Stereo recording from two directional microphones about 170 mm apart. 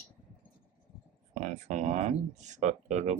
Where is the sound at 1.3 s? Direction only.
45° right (ahead or behind).